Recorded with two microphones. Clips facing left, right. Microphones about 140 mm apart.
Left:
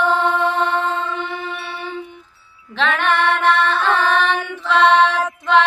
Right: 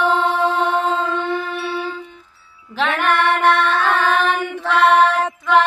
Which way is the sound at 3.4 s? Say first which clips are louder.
Right 1 dB; 65° right (ahead or behind).